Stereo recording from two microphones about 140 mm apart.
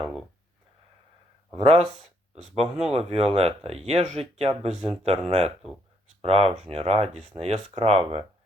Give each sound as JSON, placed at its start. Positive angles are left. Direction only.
{"t": 1.5, "sound": "speech", "side_deg": -45}